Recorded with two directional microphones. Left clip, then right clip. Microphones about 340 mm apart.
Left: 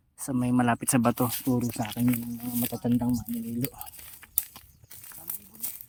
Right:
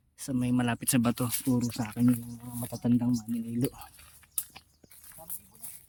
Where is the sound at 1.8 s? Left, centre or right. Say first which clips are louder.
Even; left.